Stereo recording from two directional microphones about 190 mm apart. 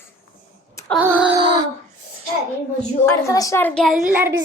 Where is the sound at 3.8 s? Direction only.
Centre (ahead or behind).